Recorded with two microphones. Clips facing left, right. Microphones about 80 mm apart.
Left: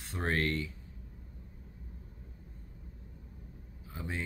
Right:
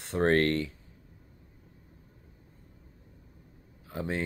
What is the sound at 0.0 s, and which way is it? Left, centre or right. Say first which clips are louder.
Speech: right 8 dB; right.